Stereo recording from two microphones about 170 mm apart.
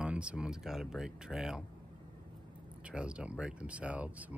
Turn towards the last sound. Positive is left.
turn(degrees=-10)  # may be behind; listen again after turning